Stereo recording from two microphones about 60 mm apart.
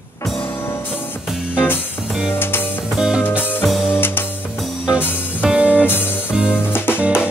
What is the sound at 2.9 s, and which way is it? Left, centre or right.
Music, centre.